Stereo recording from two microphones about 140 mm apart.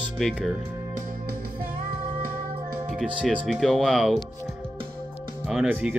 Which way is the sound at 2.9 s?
Centre (ahead or behind).